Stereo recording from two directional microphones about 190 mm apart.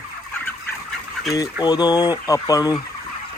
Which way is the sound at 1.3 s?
20° left (ahead or behind).